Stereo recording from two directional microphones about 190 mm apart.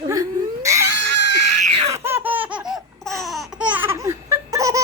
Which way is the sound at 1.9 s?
10° right (ahead or behind).